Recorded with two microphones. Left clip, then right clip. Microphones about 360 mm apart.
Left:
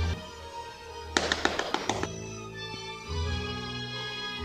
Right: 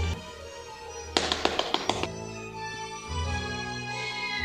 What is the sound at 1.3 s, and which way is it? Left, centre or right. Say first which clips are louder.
Tap: right 1 dB; centre.